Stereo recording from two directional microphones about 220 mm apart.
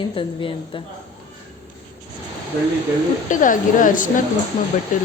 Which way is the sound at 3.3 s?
35° left (ahead or behind).